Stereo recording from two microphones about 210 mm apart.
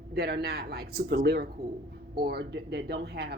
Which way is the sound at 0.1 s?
50° right (ahead or behind).